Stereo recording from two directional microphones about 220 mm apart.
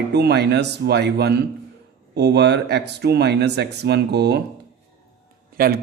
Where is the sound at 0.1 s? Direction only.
50° right (ahead or behind).